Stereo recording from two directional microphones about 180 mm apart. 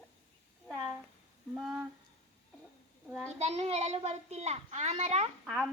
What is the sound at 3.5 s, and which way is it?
A child's voice, 35° right (ahead or behind).